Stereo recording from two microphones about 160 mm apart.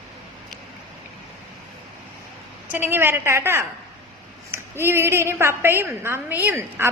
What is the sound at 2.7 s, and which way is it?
A woman's voice, 15° right (ahead or behind).